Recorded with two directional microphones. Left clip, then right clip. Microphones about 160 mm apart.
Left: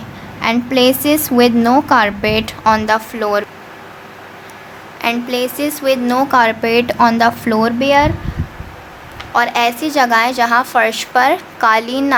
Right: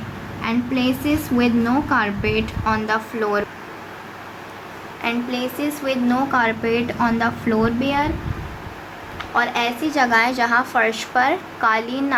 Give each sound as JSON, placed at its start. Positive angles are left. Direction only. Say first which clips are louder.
{"t": 0.4, "sound": "a woman's voice", "louder": "left 9 dB", "side_deg": 55}
{"t": 5.0, "sound": "a woman's voice", "louder": "left 7 dB", "side_deg": 45}
{"t": 9.3, "sound": "a woman's voice", "louder": "left 6 dB", "side_deg": 50}